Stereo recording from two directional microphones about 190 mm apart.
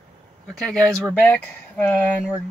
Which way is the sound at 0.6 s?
5° left (ahead or behind).